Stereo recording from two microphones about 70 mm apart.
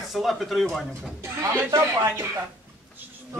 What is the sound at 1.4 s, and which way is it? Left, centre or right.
Speech, right.